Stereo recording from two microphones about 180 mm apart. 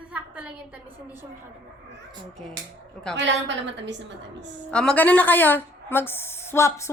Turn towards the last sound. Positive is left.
turn(degrees=15)  # may be behind; listen again after turning